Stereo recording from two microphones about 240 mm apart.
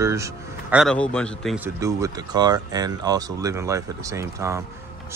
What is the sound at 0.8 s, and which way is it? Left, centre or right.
Speech, centre.